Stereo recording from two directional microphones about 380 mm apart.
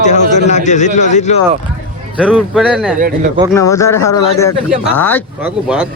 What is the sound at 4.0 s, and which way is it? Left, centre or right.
Speech, left.